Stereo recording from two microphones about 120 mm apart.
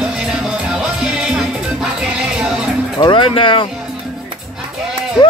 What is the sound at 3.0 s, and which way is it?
Speech, 45° left (ahead or behind).